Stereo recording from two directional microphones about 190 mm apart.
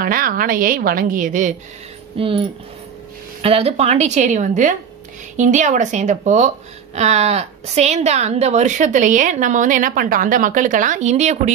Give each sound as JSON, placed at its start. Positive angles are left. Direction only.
{"t": 0.0, "sound": "a woman's voice", "side_deg": -50}
{"t": 2.1, "sound": "speech", "side_deg": -30}
{"t": 3.4, "sound": "a woman's voice", "side_deg": -30}